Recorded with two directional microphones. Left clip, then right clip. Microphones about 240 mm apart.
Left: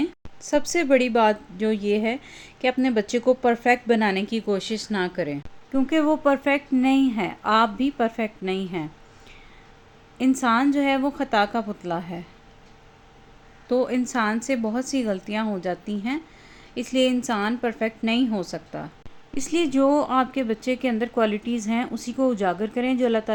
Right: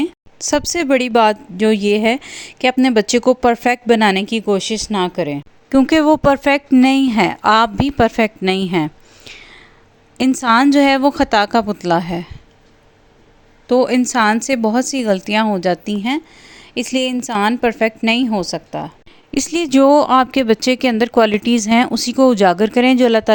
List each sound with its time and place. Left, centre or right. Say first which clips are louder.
0.0 s speech: right 7 dB; right
10.2 s speech: right 8 dB; right
13.7 s speech: right 9 dB; right